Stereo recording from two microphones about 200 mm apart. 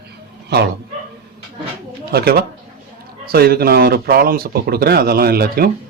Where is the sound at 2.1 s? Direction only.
50° right (ahead or behind).